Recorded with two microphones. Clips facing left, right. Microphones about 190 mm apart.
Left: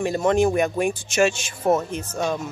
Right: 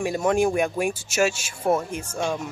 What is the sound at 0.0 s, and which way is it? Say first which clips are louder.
Speech: left 2 dB; 10° right (ahead or behind).